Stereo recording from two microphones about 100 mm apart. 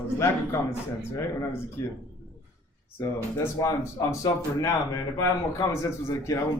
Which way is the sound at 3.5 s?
35° left (ahead or behind).